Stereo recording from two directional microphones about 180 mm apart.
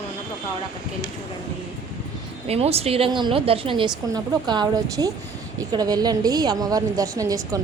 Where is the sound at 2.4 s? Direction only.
35° right (ahead or behind).